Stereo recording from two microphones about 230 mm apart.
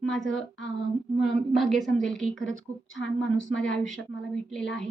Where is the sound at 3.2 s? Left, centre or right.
Left.